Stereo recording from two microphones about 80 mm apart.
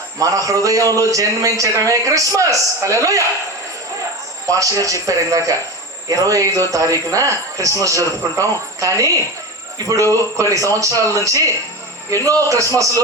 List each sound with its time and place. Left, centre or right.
0.2 s a man's voice: right
4.5 s a man's voice: right